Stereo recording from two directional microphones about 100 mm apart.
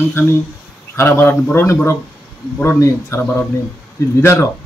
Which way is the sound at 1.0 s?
20° left (ahead or behind).